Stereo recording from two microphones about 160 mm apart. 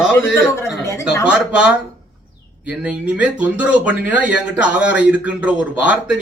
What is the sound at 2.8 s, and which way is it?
A man's voice, 10° right (ahead or behind).